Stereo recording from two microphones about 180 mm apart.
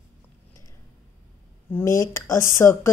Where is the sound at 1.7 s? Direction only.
10° left (ahead or behind).